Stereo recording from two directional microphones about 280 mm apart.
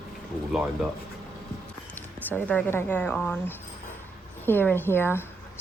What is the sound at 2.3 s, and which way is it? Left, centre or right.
A woman's voice, centre.